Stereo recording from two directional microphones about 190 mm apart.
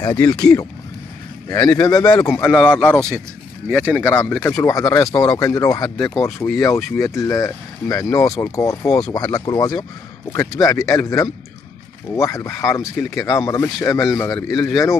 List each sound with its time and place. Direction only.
0.0 s speech: 20° left (ahead or behind)